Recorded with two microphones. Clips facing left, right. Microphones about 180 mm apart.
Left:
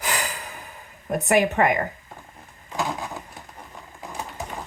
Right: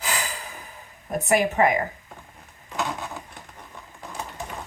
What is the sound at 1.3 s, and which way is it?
Speech, 60° left (ahead or behind).